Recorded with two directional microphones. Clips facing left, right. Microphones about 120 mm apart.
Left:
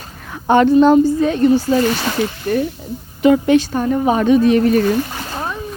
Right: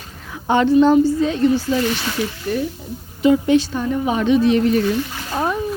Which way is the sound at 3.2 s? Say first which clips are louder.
Left 2 dB; 65° left (ahead or behind).